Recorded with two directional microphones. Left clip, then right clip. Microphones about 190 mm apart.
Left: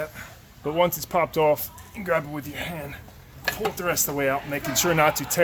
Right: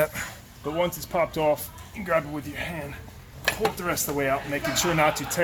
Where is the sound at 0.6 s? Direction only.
55° left (ahead or behind).